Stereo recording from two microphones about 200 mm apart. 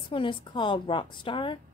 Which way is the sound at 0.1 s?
25° left (ahead or behind).